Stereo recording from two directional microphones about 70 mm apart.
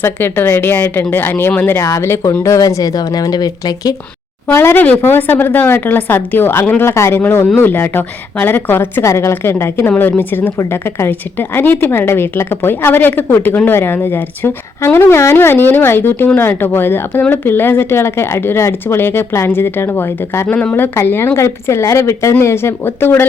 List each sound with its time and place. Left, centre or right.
0.0 s a woman's voice: left
2.6 s speech: left
4.5 s a woman's voice: left
10.0 s a woman's voice: left